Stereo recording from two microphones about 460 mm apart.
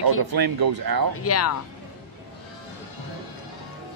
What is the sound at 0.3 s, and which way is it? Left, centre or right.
Speech, right.